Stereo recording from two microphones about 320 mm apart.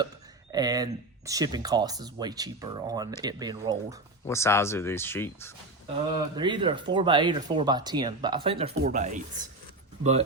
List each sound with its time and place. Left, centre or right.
0.5 s speech: centre
4.3 s speech: centre
6.3 s speech: centre